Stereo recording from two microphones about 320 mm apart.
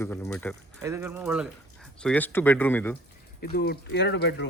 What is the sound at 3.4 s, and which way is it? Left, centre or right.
Speech, left.